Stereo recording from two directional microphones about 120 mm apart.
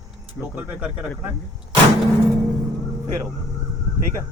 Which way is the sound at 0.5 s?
10° right (ahead or behind).